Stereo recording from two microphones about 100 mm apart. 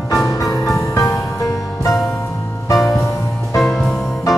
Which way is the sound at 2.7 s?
Centre (ahead or behind).